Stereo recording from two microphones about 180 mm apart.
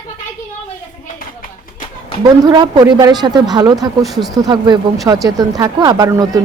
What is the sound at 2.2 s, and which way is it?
A woman's voice, 25° right (ahead or behind).